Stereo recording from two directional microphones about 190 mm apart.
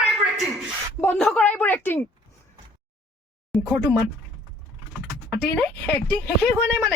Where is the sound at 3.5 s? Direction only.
Centre (ahead or behind).